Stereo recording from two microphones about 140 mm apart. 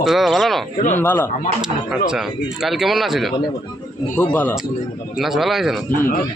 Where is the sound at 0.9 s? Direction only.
15° left (ahead or behind).